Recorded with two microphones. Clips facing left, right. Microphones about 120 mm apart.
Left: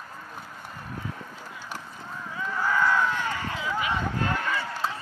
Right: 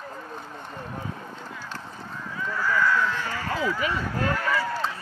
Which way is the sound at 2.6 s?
20° left (ahead or behind).